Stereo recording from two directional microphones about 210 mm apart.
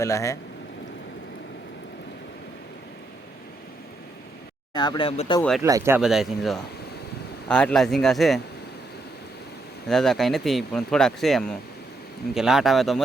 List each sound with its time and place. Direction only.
0.0 s speech: 15° left (ahead or behind)
4.7 s speech: 20° left (ahead or behind)
5.4 s speech: centre (ahead or behind)
5.6 s speech: 15° right (ahead or behind)
9.9 s speech: centre (ahead or behind)